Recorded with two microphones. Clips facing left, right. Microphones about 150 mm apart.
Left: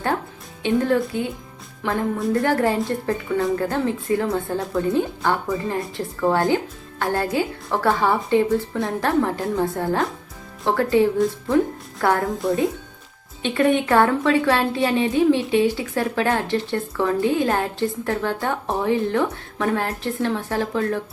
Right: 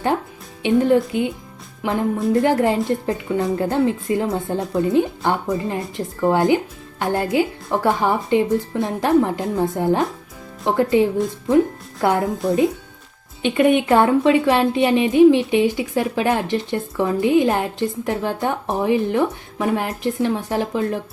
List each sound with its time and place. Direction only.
0.6 s a woman's voice: 15° right (ahead or behind)
12.3 s speech: centre (ahead or behind)
13.4 s a woman's voice: 15° right (ahead or behind)